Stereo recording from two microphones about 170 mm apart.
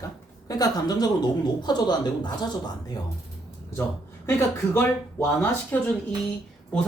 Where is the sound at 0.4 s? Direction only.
20° left (ahead or behind).